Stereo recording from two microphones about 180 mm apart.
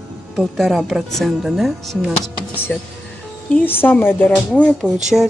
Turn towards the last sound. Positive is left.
turn(degrees=-5)  # may be behind; listen again after turning